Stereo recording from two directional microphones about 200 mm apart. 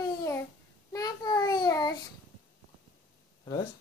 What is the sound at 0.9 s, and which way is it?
A child's voice, 20° left (ahead or behind).